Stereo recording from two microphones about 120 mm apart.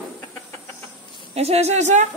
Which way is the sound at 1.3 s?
60° right (ahead or behind).